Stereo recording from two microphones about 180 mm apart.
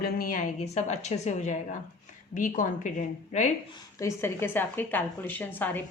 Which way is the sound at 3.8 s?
15° left (ahead or behind).